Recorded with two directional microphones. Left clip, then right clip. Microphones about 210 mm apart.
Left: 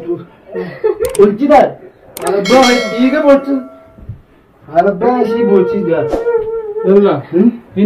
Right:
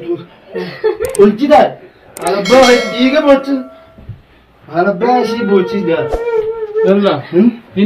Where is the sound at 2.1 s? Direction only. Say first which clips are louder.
Right 1 dB; centre (ahead or behind).